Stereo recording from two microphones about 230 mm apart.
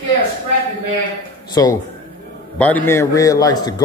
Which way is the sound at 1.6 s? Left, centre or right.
Centre.